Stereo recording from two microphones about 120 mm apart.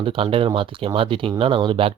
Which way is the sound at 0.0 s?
50° right (ahead or behind).